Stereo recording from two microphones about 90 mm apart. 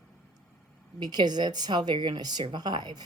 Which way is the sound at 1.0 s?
50° right (ahead or behind).